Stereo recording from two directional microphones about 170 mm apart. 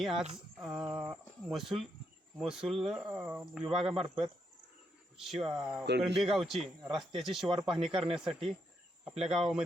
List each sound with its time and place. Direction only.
0.0 s speech: centre (ahead or behind)
3.9 s speech: 30° right (ahead or behind)
5.2 s speech: centre (ahead or behind)
7.4 s speech: 30° right (ahead or behind)
8.1 s speech: 5° right (ahead or behind)